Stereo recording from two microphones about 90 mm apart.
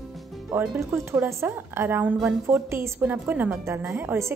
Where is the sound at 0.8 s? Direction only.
30° right (ahead or behind).